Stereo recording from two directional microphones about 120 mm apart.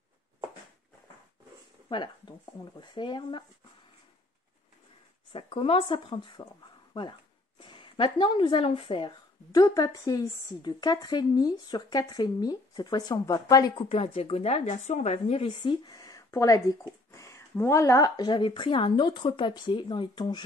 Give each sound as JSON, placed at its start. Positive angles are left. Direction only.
{"t": 1.9, "sound": "speech", "side_deg": 40}
{"t": 5.3, "sound": "speech", "side_deg": 50}
{"t": 9.5, "sound": "speech", "side_deg": 30}
{"t": 13.7, "sound": "a woman's voice", "side_deg": 50}
{"t": 15.4, "sound": "speech", "side_deg": 40}